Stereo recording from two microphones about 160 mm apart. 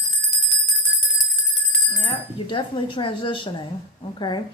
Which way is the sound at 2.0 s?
35° left (ahead or behind).